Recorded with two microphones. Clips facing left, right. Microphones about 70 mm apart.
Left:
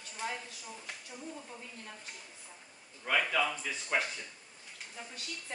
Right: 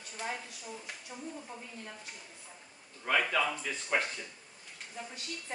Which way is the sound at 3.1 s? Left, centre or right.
Centre.